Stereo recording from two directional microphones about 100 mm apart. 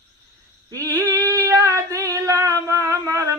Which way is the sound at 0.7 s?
35° right (ahead or behind).